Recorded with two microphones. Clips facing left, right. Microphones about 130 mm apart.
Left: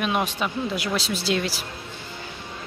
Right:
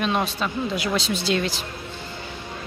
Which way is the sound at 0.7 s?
Centre (ahead or behind).